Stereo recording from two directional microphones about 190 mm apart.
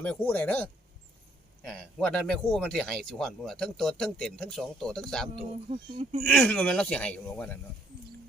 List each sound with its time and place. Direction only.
0.0 s speech: 10° left (ahead or behind)
1.7 s speech: 5° left (ahead or behind)
5.6 s speech: 30° right (ahead or behind)
6.2 s speech: 5° left (ahead or behind)